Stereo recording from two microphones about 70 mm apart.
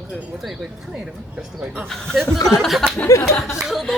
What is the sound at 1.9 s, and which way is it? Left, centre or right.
Speech, centre.